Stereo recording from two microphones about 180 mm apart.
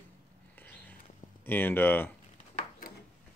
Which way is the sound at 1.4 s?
10° left (ahead or behind).